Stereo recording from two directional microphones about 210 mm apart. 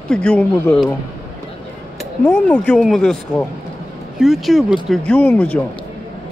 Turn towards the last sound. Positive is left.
turn(degrees=5)  # may be behind; listen again after turning